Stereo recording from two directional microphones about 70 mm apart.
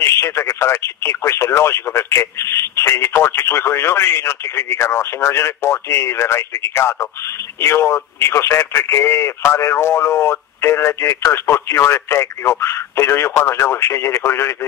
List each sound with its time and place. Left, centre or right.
0.0 s speech: left